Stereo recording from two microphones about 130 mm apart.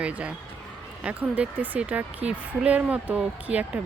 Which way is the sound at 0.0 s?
10° right (ahead or behind).